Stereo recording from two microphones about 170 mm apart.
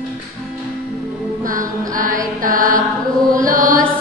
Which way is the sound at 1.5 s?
50° right (ahead or behind).